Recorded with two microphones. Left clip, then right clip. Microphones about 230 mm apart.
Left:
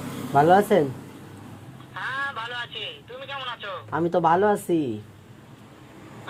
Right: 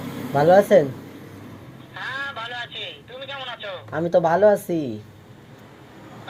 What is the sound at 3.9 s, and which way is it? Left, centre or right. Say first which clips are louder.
Speech: right 2 dB; left.